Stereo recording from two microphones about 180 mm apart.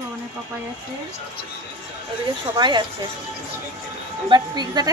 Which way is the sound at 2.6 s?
25° right (ahead or behind).